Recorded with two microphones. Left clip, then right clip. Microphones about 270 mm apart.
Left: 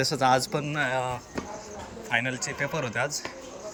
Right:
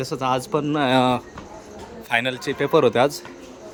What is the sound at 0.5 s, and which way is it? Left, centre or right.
Speech, right.